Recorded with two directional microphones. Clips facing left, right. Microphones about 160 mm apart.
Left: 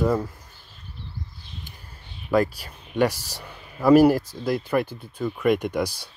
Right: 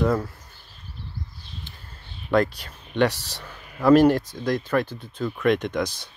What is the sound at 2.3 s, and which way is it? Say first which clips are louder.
Speech: even; 5° left (ahead or behind).